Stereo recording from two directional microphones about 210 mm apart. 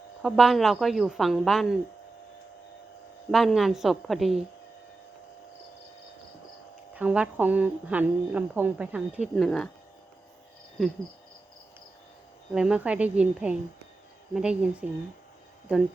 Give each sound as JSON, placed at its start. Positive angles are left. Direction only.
{"t": 0.2, "sound": "speech", "side_deg": 0}
{"t": 3.3, "sound": "speech", "side_deg": 0}
{"t": 6.9, "sound": "speech", "side_deg": -5}
{"t": 12.5, "sound": "speech", "side_deg": -5}